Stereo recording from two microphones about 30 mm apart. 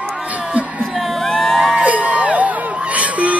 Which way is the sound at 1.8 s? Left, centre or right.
Right.